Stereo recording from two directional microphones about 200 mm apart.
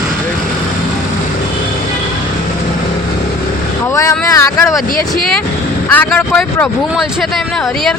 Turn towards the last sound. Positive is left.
turn(degrees=0)  # may be behind; listen again after turning